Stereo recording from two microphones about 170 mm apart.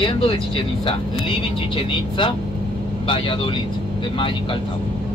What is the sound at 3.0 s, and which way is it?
Speech, 30° left (ahead or behind).